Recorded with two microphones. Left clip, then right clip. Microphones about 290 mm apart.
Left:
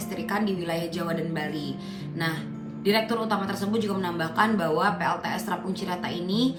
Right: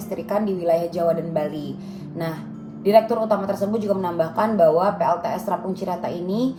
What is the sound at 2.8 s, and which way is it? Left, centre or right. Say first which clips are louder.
A woman's voice: right 8 dB; left.